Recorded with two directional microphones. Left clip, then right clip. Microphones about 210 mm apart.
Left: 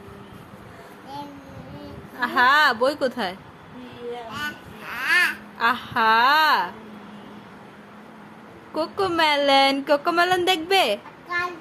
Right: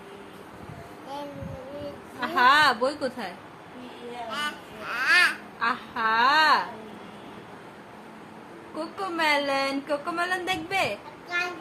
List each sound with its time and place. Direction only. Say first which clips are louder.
2.2 s a woman's voice: left 2 dB; 25° left (ahead or behind)
4.4 s babbling: even; 5° right (ahead or behind)
5.5 s speech: left 6 dB; 40° left (ahead or behind)
8.7 s speech: left 8 dB; 40° left (ahead or behind)